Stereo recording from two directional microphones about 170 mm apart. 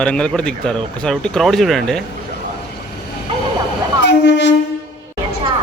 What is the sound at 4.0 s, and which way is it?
Train, 90° left.